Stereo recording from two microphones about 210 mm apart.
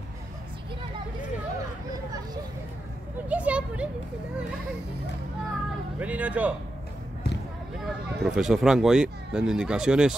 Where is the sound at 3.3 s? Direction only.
5° right (ahead or behind).